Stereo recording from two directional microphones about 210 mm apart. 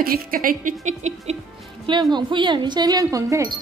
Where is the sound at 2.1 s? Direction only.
20° right (ahead or behind).